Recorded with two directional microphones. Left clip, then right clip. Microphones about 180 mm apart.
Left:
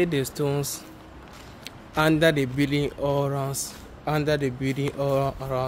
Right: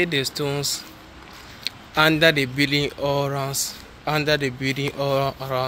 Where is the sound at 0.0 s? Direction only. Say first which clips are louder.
Right 2 dB; 20° left (ahead or behind).